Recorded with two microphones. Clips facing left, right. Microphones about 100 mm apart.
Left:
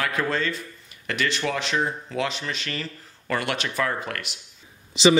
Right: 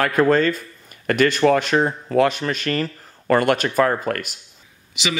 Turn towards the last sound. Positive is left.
turn(degrees=30)  # may be behind; listen again after turning